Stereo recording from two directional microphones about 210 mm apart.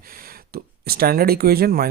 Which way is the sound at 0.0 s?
45° right (ahead or behind).